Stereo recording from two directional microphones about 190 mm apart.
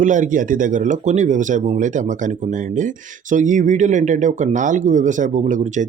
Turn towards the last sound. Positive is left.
turn(degrees=-40)  # may be behind; listen again after turning